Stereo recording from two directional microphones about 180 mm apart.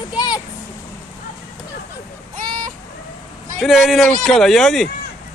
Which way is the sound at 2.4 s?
25° right (ahead or behind).